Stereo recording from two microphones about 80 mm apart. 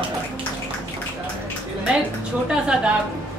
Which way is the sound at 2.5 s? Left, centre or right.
Centre.